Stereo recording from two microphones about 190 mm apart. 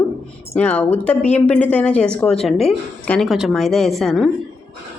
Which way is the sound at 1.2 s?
35° left (ahead or behind).